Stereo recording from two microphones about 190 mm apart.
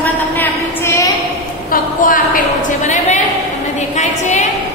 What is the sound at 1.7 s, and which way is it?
A woman's voice, 45° left (ahead or behind).